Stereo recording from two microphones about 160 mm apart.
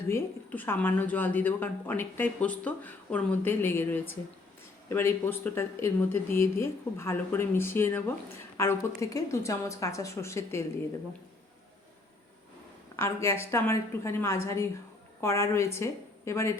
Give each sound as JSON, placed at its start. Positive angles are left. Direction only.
{"t": 0.1, "sound": "a woman's voice", "side_deg": 15}
{"t": 13.0, "sound": "a woman's voice", "side_deg": 15}